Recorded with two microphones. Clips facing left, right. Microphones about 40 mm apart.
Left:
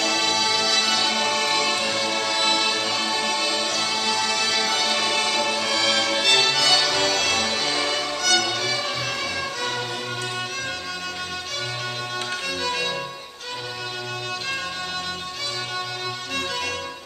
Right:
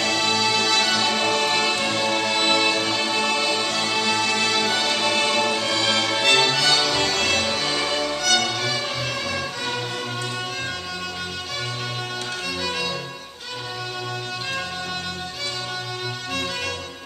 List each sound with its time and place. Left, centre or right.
0.4 s music: centre